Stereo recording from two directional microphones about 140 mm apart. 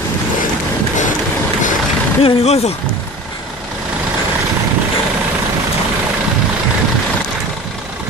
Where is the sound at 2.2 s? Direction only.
50° left (ahead or behind).